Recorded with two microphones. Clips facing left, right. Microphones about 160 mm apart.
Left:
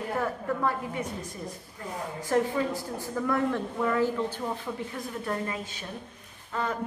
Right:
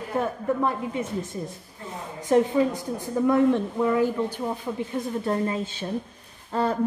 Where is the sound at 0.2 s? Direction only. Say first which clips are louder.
Right 5 dB; 20° right (ahead or behind).